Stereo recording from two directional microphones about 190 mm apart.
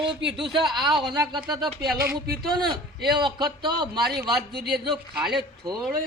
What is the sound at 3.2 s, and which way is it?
Speech, 20° right (ahead or behind).